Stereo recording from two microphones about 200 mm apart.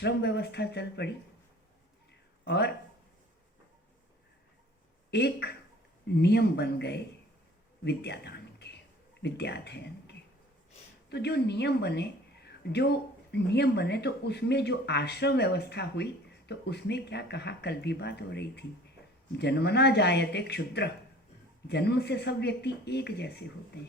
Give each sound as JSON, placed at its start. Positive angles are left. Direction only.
{"t": 0.0, "sound": "a woman's voice", "side_deg": 60}
{"t": 2.4, "sound": "speech", "side_deg": 55}
{"t": 5.1, "sound": "a woman's voice", "side_deg": 55}
{"t": 7.9, "sound": "a sound", "side_deg": 55}
{"t": 9.2, "sound": "a woman's voice", "side_deg": 55}